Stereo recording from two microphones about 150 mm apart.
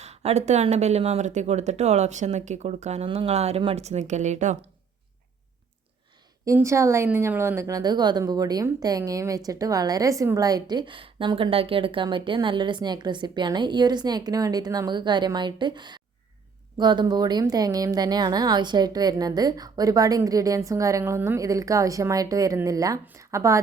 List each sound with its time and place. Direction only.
0.0 s speech: 45° right (ahead or behind)
6.4 s speech: 20° right (ahead or behind)